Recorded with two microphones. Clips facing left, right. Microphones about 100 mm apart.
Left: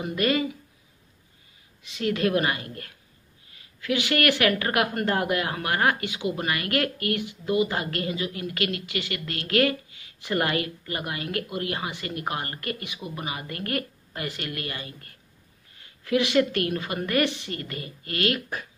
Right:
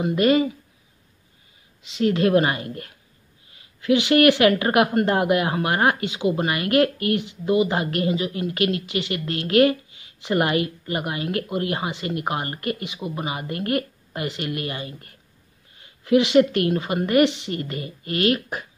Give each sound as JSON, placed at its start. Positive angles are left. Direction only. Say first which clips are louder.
{"t": 0.0, "sound": "a woman's voice", "louder": "right 6 dB", "side_deg": -25}
{"t": 1.8, "sound": "a woman's voice", "louder": "right 5 dB", "side_deg": -25}